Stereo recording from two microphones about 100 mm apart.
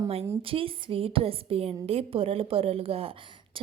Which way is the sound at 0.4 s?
65° right (ahead or behind).